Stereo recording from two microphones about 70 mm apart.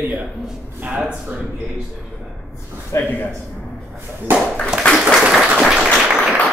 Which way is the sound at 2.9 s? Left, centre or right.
Left.